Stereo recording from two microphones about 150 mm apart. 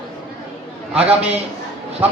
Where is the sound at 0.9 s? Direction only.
40° right (ahead or behind).